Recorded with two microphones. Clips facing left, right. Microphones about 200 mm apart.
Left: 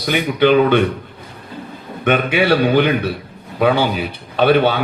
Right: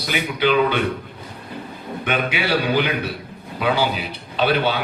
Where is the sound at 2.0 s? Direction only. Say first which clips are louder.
Left 8 dB; 55° left (ahead or behind).